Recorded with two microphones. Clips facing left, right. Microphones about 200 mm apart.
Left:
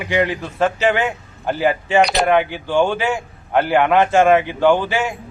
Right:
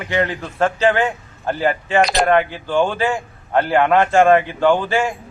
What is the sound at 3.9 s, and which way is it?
Speech, 15° left (ahead or behind).